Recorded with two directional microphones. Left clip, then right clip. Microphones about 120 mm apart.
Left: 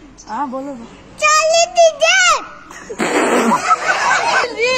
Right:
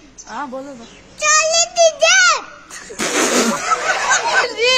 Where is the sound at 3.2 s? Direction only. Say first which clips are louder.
Left 3 dB; 40° right (ahead or behind).